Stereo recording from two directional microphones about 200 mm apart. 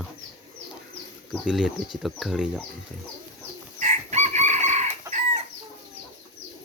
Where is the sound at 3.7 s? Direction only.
35° right (ahead or behind).